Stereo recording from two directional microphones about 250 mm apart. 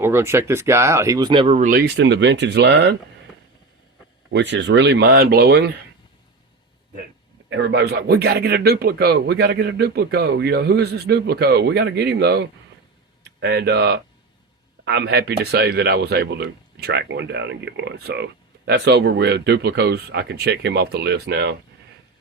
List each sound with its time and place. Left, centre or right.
0.0 s speech: centre; by 3.0 s right
4.3 s speech: right
7.5 s speech: right